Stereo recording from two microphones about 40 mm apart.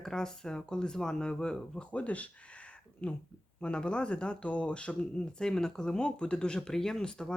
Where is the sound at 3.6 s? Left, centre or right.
Left.